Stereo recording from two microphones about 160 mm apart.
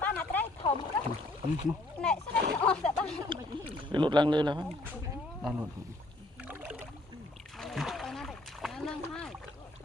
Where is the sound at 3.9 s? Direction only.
30° right (ahead or behind).